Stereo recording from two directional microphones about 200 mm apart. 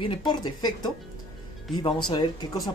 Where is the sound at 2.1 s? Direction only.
20° left (ahead or behind).